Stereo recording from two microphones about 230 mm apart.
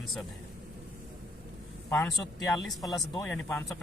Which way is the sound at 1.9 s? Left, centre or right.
Centre.